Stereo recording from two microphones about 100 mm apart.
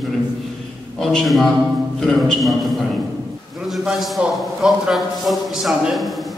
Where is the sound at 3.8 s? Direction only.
5° right (ahead or behind).